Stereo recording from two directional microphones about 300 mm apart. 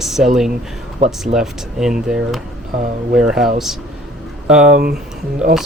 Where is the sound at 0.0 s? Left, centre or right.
Centre.